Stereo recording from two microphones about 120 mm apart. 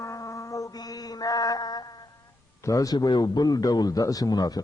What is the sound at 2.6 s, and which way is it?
A man's voice, 30° left (ahead or behind).